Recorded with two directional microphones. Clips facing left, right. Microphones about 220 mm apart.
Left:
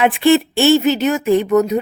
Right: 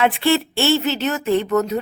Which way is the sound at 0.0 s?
15° left (ahead or behind).